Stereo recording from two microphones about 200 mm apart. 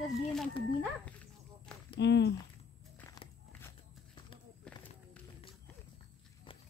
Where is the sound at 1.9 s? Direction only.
60° left (ahead or behind).